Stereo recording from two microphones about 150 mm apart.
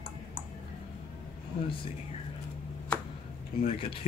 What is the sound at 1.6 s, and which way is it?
Speech, 35° left (ahead or behind).